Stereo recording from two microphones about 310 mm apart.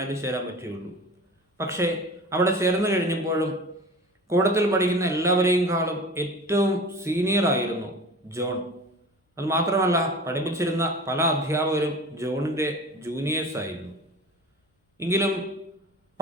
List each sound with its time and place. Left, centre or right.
0.0 s a man's voice: centre
9.3 s a man's voice: centre
14.9 s a man's voice: centre